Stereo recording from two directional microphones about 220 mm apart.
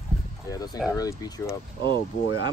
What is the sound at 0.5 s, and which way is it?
Speech, 15° left (ahead or behind).